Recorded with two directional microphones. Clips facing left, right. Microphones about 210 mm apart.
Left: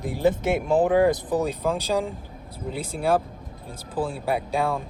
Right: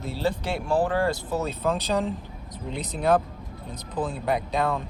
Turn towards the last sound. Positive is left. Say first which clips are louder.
# left 1 dB
turn(degrees=10)  # may be behind; listen again after turning